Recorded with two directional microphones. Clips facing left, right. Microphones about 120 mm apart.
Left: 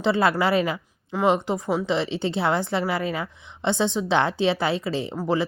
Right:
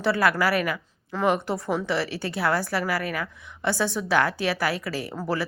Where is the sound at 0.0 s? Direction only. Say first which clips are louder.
Left 2 dB; 20° left (ahead or behind).